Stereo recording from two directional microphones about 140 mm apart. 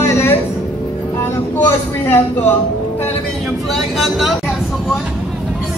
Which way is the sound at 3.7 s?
Centre (ahead or behind).